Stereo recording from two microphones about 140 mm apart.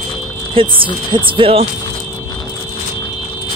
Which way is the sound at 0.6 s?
40° right (ahead or behind).